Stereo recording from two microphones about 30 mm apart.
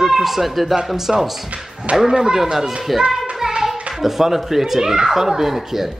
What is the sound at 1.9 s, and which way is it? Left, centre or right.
Speech, right.